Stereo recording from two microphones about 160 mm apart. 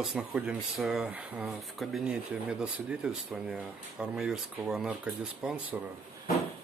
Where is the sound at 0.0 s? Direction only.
5° right (ahead or behind).